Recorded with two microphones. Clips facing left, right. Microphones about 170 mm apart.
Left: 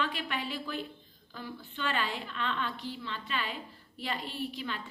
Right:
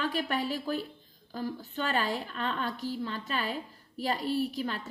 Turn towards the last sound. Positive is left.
turn(degrees=-40)  # may be behind; listen again after turning